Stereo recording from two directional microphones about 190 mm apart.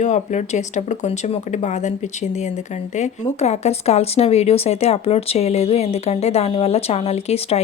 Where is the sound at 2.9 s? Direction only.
35° left (ahead or behind).